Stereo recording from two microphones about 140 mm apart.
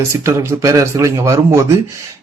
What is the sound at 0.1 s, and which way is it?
A man's voice, 20° right (ahead or behind).